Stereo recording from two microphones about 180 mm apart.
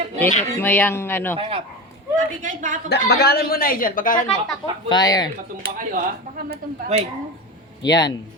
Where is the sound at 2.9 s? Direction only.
65° left (ahead or behind); by 4.4 s 50° left (ahead or behind).